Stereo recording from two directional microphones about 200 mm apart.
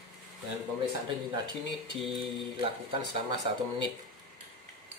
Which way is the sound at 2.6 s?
25° right (ahead or behind).